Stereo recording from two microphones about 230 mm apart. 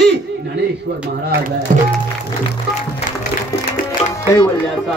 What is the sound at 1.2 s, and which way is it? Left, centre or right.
Speech, right.